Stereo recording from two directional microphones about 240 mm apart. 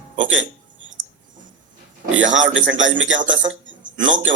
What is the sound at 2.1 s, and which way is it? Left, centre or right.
Speech, right.